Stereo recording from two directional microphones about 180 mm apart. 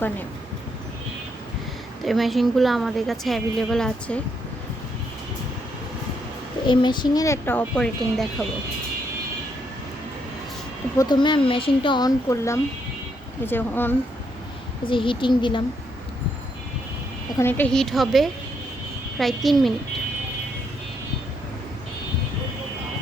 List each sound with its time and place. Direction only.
2.0 s a woman's voice: centre (ahead or behind)
6.7 s speech: 25° left (ahead or behind); by 8.3 s 5° left (ahead or behind)
10.9 s speech: 25° left (ahead or behind)
14.8 s speech: 30° left (ahead or behind)
17.3 s a woman's voice: 10° left (ahead or behind)